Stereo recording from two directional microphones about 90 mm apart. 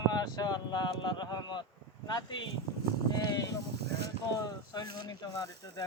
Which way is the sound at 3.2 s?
50° left (ahead or behind).